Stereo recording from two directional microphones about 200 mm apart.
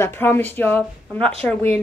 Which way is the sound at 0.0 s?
10° left (ahead or behind).